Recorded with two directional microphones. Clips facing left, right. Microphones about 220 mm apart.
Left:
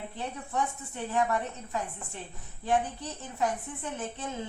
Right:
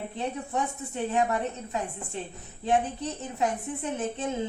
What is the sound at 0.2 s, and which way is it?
A woman's voice, 20° right (ahead or behind).